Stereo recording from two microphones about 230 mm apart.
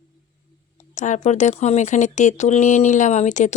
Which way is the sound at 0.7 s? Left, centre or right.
Left.